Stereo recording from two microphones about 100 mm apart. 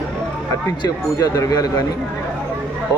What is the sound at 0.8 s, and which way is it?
Speech, 40° left (ahead or behind).